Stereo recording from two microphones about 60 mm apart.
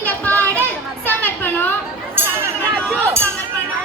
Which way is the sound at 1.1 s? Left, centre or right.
Left.